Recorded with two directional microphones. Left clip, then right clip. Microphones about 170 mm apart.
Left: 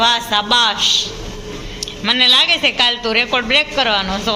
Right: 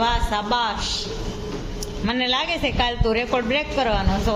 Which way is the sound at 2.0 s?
5° right (ahead or behind).